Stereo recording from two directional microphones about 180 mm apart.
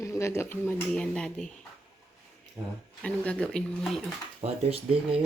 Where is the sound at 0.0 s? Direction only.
15° left (ahead or behind).